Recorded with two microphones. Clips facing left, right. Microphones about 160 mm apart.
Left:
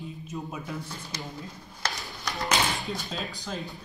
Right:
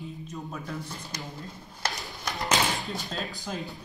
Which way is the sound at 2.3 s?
Centre (ahead or behind).